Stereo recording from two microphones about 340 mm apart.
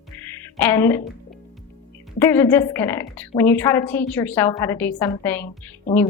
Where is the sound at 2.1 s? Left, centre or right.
Centre.